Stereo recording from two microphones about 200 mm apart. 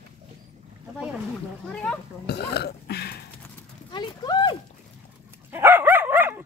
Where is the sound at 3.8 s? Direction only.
25° left (ahead or behind).